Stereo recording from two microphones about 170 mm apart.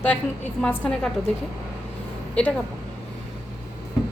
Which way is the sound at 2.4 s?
5° left (ahead or behind).